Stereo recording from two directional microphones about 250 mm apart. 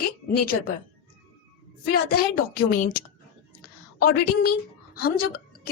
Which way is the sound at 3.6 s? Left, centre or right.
Left.